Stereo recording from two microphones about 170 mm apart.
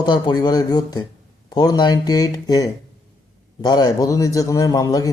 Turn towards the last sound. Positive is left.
turn(degrees=20)  # may be behind; listen again after turning